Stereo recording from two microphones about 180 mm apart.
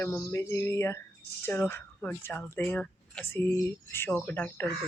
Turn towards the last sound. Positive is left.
turn(degrees=10)  # may be behind; listen again after turning